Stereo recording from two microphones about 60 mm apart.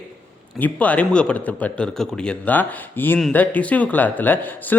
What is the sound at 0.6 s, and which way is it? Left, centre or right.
A man's voice, left.